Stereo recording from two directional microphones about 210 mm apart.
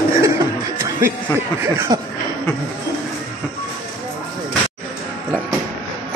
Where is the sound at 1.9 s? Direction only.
20° right (ahead or behind).